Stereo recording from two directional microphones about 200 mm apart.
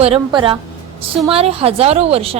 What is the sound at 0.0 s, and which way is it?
A woman's voice, 25° right (ahead or behind).